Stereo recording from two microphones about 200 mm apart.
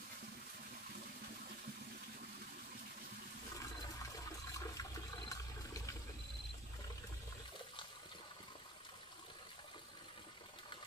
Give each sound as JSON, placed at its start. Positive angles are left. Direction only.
{"t": 5.3, "sound": "toilet flush", "side_deg": 15}